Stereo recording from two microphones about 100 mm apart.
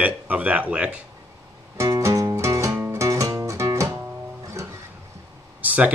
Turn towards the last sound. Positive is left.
turn(degrees=-15)  # may be behind; listen again after turning